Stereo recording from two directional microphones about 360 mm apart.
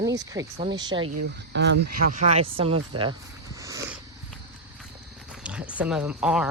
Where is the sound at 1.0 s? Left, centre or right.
Right; by 2.8 s centre.